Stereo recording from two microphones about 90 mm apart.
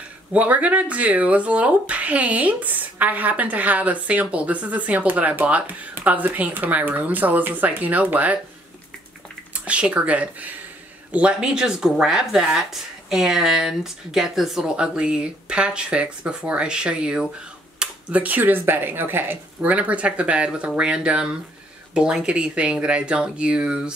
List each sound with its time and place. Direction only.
0.3 s speech: 15° right (ahead or behind)
9.5 s speech: 15° right (ahead or behind)